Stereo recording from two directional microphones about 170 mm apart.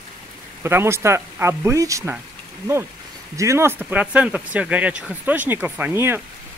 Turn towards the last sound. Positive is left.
turn(degrees=-15)  # may be behind; listen again after turning